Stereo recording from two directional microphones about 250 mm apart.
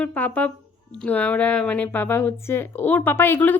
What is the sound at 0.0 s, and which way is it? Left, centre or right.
Speech, centre.